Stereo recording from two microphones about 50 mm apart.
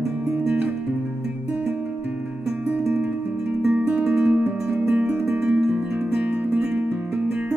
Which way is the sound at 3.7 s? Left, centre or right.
Right.